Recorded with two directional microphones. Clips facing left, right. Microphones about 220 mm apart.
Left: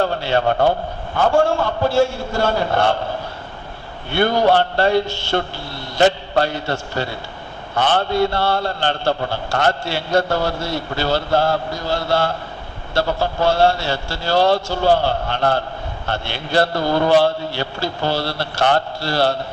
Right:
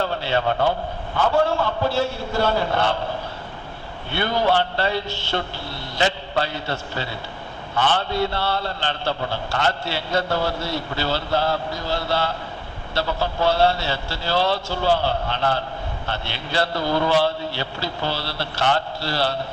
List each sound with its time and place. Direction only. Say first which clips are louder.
0.0 s a man's voice: left 4 dB; 50° left (ahead or behind)
4.1 s a man's voice: left 5 dB; 50° left (ahead or behind)